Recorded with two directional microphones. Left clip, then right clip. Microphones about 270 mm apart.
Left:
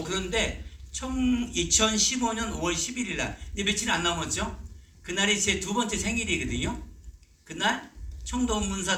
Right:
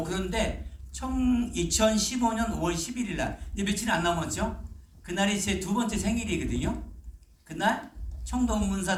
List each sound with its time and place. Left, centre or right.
0.0 s a man's voice: right